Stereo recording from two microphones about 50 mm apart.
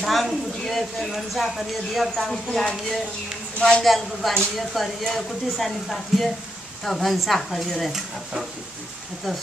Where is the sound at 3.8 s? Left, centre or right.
Centre.